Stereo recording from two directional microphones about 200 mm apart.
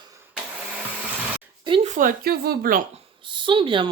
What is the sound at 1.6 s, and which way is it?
Speech, 25° right (ahead or behind).